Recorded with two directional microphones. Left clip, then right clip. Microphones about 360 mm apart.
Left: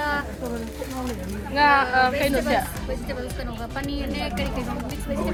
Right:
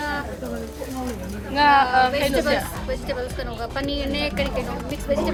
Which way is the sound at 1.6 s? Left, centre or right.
Centre.